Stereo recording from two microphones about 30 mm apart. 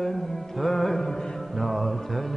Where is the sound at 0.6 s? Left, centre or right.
Centre.